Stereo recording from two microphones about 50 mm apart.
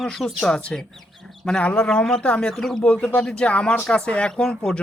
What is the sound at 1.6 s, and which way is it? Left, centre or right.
Speech, left.